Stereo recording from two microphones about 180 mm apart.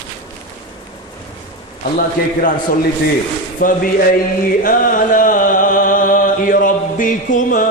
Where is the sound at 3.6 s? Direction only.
45° left (ahead or behind).